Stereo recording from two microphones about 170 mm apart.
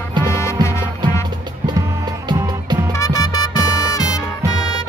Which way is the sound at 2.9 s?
20° left (ahead or behind).